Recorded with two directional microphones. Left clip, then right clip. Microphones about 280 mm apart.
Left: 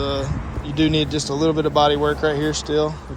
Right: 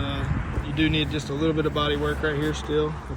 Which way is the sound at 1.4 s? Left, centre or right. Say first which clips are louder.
Left 7 dB; centre.